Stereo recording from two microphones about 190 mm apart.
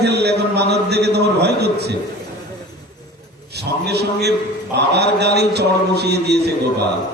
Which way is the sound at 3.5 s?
60° right (ahead or behind).